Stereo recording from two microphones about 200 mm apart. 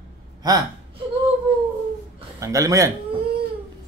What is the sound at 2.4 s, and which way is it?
Speech, 15° right (ahead or behind).